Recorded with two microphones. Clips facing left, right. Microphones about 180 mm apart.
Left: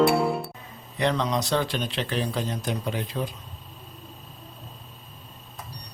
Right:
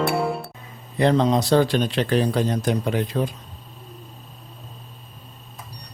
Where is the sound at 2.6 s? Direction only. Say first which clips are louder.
Right 7 dB; 70° right (ahead or behind).